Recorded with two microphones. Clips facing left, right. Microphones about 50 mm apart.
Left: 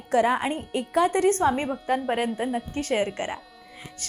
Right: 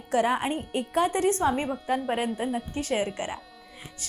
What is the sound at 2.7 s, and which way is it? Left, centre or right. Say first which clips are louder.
Speech: left 2 dB; left.